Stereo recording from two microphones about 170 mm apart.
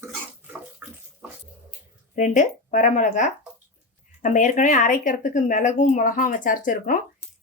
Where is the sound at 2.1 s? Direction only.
45° left (ahead or behind).